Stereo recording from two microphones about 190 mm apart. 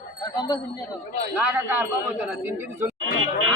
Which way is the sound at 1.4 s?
10° right (ahead or behind).